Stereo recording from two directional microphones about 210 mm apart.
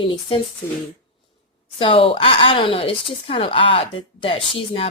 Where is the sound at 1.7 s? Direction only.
25° left (ahead or behind).